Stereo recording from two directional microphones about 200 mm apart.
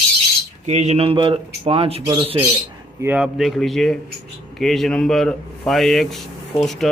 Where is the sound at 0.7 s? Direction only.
35° right (ahead or behind).